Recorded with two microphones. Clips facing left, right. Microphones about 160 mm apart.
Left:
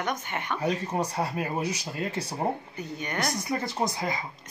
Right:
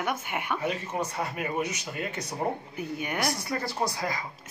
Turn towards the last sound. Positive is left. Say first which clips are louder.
# left 1 dB
turn(degrees=20)  # may be behind; listen again after turning